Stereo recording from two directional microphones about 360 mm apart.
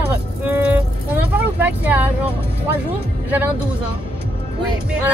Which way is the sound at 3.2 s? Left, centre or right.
Centre.